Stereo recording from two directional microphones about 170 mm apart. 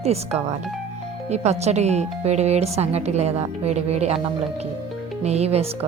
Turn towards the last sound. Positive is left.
turn(degrees=-35)  # may be behind; listen again after turning